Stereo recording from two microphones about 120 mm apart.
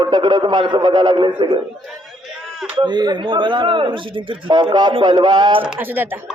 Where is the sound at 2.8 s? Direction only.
35° right (ahead or behind).